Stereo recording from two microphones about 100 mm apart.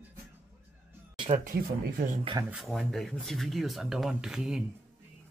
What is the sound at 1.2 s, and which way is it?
Speech, 80° right.